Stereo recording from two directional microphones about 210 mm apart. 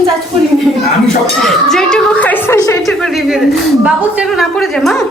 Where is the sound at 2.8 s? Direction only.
Centre (ahead or behind).